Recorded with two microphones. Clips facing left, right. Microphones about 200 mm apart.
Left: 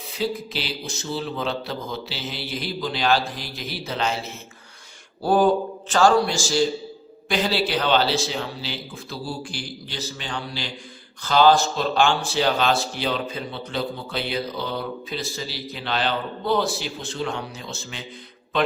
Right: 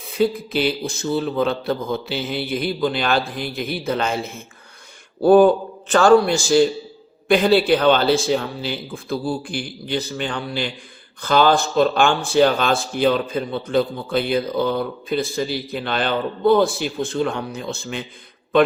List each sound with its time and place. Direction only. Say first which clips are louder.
0.1 s a man's voice: right 7 dB; 55° right (ahead or behind)